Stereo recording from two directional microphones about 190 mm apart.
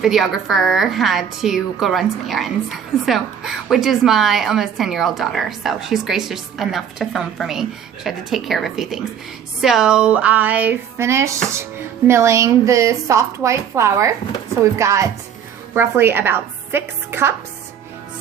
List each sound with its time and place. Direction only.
0.0 s a woman's voice: centre (ahead or behind)